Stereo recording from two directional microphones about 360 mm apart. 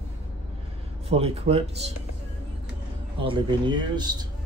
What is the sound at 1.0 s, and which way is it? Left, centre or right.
Speech, centre.